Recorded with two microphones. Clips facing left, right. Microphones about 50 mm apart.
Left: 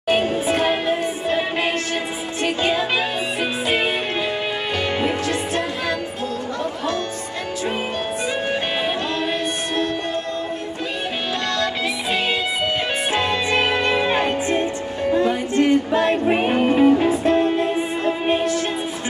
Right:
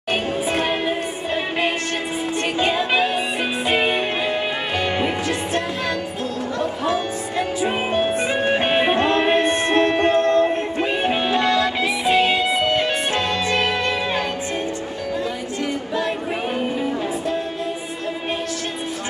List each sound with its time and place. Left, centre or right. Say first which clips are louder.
0.1 s music: left 3 dB; centre
4.9 s music: even; centre
8.6 s music: right 5 dB; right
11.1 s music: right 6 dB; centre
15.1 s music: left 9 dB; left